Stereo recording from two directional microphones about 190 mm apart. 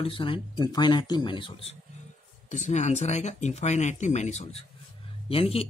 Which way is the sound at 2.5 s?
40° left (ahead or behind).